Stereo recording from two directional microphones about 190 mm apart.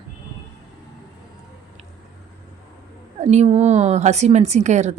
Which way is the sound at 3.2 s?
35° right (ahead or behind).